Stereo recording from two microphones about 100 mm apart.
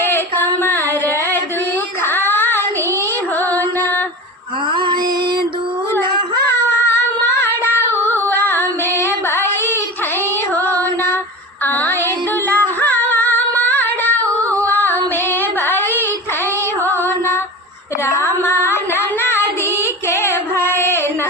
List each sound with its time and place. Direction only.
0.0 s a sound: 20° left (ahead or behind)
2.0 s child singing: 20° left (ahead or behind)
3.5 s music: 20° left (ahead or behind)
4.7 s female singing: 50° right (ahead or behind)
6.8 s female singing: 25° left (ahead or behind)
9.3 s child singing: 20° left (ahead or behind)
11.6 s music: 20° left (ahead or behind)
14.3 s female singing: 15° left (ahead or behind)
16.9 s music: 20° left (ahead or behind)